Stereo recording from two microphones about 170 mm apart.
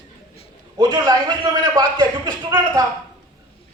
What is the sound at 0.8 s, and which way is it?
A man's voice, 25° right (ahead or behind).